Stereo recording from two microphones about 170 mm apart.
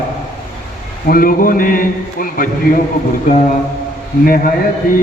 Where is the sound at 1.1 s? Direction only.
55° left (ahead or behind).